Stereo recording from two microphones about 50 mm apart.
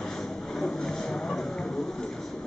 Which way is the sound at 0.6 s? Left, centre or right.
Centre.